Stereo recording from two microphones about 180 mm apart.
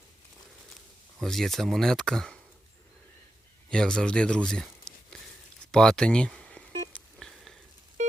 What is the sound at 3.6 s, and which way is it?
Speech, 5° left (ahead or behind).